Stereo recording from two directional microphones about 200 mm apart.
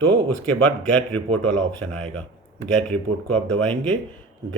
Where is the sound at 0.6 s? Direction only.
5° left (ahead or behind).